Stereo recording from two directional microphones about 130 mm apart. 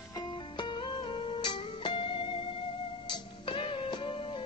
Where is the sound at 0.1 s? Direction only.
35° left (ahead or behind).